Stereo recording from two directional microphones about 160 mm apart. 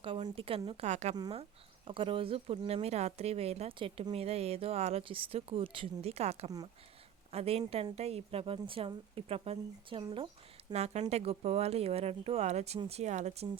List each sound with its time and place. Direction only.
0.0 s a woman's voice: 30° right (ahead or behind)